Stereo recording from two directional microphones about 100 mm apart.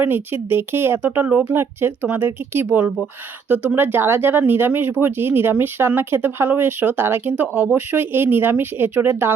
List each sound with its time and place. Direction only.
0.0 s speech: 20° right (ahead or behind)